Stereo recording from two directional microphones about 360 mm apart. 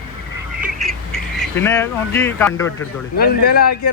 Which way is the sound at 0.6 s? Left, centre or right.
Centre.